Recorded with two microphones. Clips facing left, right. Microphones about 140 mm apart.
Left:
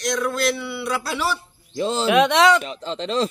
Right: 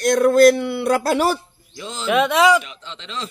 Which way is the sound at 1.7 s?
35° left (ahead or behind).